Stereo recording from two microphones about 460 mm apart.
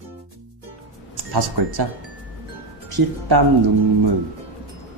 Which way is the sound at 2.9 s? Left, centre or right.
Right.